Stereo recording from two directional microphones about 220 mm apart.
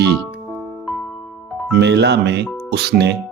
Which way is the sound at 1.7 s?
50° right (ahead or behind).